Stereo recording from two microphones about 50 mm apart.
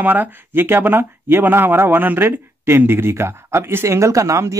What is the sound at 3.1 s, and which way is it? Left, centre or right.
Speech, right.